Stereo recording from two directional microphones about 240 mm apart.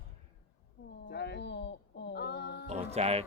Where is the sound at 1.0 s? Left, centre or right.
Left.